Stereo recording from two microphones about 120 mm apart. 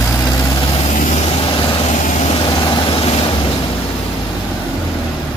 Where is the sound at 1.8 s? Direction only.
80° left.